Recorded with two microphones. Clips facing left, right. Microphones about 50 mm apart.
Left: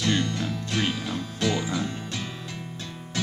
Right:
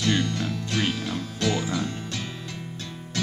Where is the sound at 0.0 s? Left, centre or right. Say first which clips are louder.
Right 1 dB; centre.